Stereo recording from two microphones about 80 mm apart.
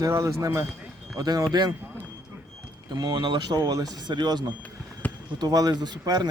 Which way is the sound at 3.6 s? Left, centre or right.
Right.